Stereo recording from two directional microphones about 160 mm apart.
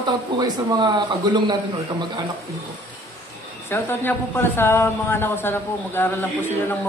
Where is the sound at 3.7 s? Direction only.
15° left (ahead or behind).